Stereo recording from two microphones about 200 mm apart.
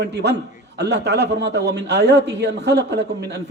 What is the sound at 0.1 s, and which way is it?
A man's voice, 55° right (ahead or behind).